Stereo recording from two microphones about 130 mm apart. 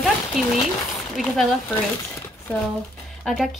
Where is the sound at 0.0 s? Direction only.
Centre (ahead or behind).